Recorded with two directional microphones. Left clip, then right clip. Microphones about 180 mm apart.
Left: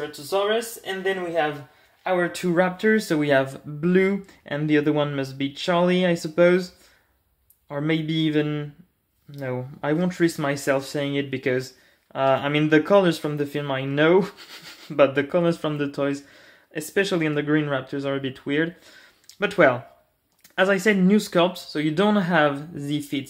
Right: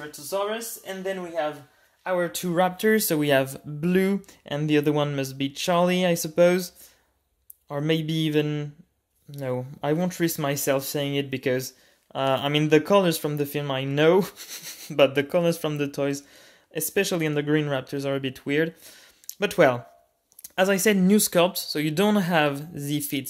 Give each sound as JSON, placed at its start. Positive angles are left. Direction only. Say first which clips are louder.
{"t": 0.3, "sound": "speech", "louder": "left 5 dB", "side_deg": -10}
{"t": 2.0, "sound": "speech", "louder": "left 2 dB", "side_deg": -20}
{"t": 2.4, "sound": "speech", "louder": "even", "side_deg": -35}